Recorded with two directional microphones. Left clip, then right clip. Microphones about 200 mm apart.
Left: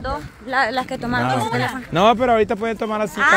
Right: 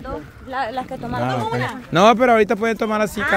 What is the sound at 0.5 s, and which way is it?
Speech, 40° left (ahead or behind).